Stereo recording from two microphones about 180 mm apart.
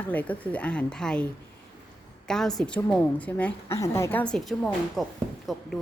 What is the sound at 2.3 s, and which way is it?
A woman's voice, 5° left (ahead or behind).